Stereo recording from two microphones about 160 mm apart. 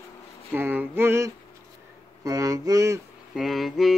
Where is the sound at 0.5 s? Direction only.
10° right (ahead or behind).